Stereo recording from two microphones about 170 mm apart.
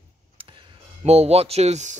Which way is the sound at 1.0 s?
35° right (ahead or behind).